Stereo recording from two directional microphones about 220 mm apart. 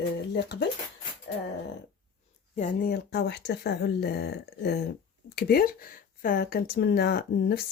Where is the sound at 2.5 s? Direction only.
35° left (ahead or behind).